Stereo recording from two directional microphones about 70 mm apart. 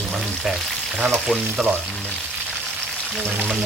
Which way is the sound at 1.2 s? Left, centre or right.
Centre.